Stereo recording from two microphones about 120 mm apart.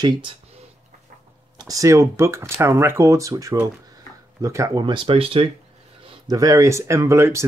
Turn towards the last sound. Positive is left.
turn(degrees=-25)  # may be behind; listen again after turning